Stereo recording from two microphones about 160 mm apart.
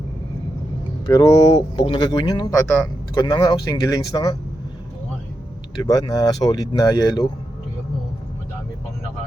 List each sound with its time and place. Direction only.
1.0 s speech: 25° left (ahead or behind)
2.6 s speech: 5° left (ahead or behind)
3.2 s speech: 25° left (ahead or behind)
5.8 s speech: 25° left (ahead or behind)